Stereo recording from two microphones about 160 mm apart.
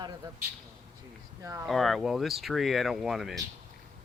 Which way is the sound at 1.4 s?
20° right (ahead or behind).